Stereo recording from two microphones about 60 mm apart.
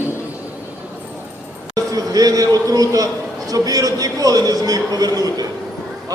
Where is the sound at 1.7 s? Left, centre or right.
Right.